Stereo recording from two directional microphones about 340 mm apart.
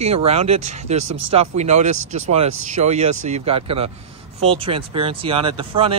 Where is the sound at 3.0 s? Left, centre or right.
Right.